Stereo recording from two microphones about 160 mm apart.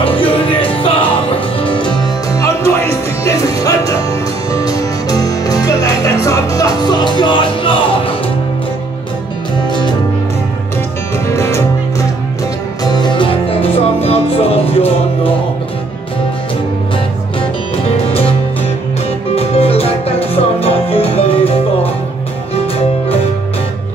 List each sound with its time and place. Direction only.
0.0 s music: 35° left (ahead or behind)
2.3 s music: 20° left (ahead or behind)
11.2 s music: 15° left (ahead or behind)
12.8 s music: 25° left (ahead or behind)
17.4 s music: 40° left (ahead or behind)
19.3 s music: 40° left (ahead or behind)
22.8 s music: 40° left (ahead or behind)